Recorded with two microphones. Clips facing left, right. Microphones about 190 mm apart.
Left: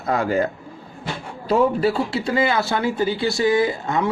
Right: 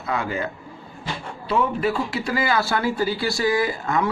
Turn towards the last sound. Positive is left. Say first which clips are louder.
# left 2 dB
turn(degrees=25)  # may be behind; listen again after turning